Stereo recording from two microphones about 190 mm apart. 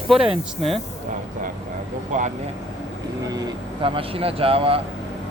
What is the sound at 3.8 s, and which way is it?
Speech, 30° right (ahead or behind).